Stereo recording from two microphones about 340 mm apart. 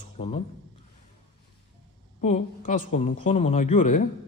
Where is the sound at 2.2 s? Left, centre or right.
Left.